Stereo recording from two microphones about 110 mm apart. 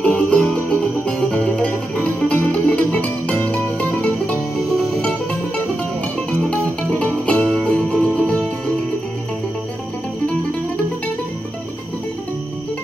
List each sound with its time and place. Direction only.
0.0 s music: 10° left (ahead or behind)
4.6 s music: centre (ahead or behind)
6.4 s music: 5° left (ahead or behind)